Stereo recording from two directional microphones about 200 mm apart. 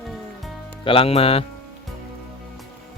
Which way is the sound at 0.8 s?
25° left (ahead or behind).